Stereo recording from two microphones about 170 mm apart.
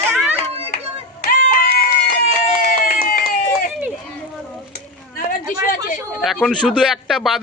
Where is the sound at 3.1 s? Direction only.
55° left (ahead or behind).